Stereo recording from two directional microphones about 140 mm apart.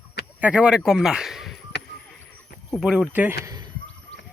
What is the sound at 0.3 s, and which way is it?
Speech, 10° right (ahead or behind).